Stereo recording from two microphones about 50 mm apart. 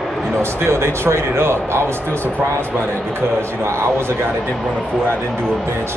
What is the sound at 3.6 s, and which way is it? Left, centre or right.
Speech, right.